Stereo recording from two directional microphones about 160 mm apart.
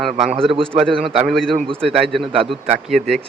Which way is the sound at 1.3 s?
Centre (ahead or behind).